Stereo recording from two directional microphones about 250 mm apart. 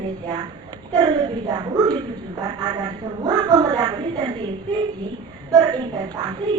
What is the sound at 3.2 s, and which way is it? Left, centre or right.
Speech, centre.